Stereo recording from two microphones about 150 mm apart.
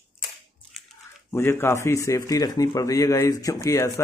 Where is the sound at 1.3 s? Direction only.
15° left (ahead or behind).